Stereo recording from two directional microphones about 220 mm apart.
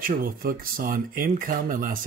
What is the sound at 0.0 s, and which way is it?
Speech, 40° right (ahead or behind).